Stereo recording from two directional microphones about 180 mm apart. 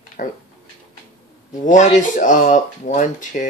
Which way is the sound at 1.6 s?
45° left (ahead or behind).